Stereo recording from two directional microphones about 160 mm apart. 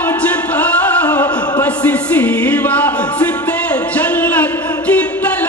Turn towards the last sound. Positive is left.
turn(degrees=10)  # may be behind; listen again after turning